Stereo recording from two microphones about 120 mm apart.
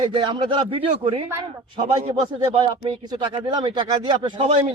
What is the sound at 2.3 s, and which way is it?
Speech, 40° right (ahead or behind).